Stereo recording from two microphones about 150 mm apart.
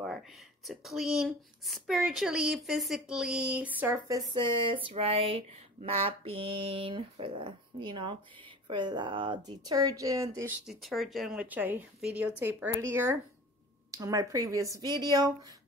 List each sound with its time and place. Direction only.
0.7 s speech: centre (ahead or behind); by 10.5 s 20° right (ahead or behind)
10.6 s speech: centre (ahead or behind); by 15.5 s 25° right (ahead or behind)